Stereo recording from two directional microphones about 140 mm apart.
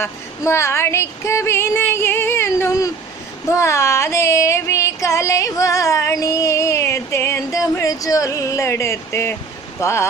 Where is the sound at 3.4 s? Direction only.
20° left (ahead or behind).